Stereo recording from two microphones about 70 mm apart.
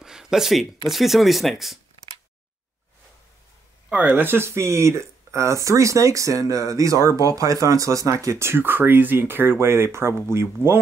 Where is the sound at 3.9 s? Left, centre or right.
Right.